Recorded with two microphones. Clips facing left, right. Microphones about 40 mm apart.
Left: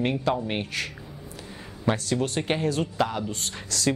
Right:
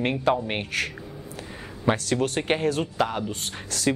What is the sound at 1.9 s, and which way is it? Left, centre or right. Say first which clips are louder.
Speech: right 2 dB; centre.